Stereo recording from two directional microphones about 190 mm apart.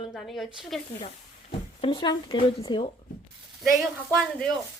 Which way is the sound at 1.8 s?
25° left (ahead or behind).